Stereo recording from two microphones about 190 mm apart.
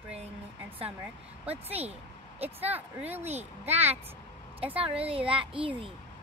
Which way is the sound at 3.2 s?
35° right (ahead or behind).